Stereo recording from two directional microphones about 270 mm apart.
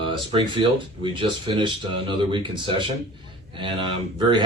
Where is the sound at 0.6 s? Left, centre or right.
Centre.